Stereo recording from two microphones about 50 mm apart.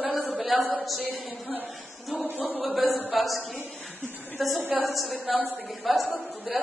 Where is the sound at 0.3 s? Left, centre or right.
Centre.